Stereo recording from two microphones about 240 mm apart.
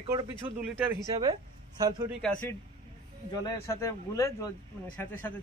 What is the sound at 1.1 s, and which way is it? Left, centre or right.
Speech, centre.